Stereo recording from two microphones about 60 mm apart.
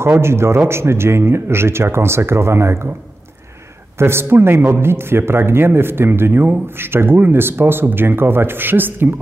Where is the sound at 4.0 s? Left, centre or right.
Right.